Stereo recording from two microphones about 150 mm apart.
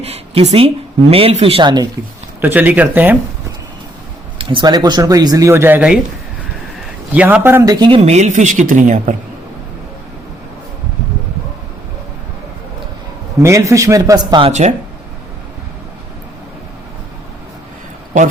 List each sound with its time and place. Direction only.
0.0 s speech: 40° right (ahead or behind)
2.4 s speech: 10° right (ahead or behind)
4.4 s speech: 35° right (ahead or behind); by 6.0 s 10° right (ahead or behind)
7.1 s speech: 10° right (ahead or behind)
7.9 s a woman's voice: 40° right (ahead or behind)
13.4 s speech: 20° right (ahead or behind)